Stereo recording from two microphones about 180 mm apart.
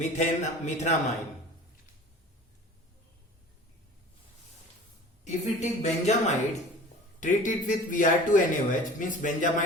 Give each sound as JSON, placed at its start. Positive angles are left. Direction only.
{"t": 0.0, "sound": "a woman's voice", "side_deg": 40}
{"t": 5.2, "sound": "a woman's voice", "side_deg": 40}